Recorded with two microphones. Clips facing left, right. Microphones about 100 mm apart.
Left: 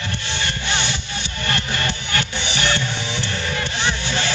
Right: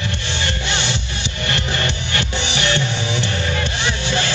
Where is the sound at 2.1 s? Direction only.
20° right (ahead or behind).